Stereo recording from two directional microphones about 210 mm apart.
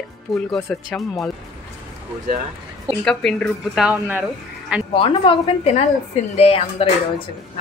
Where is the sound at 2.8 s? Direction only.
Centre (ahead or behind).